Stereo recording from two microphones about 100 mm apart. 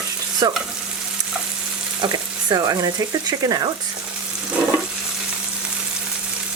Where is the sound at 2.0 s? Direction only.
35° right (ahead or behind).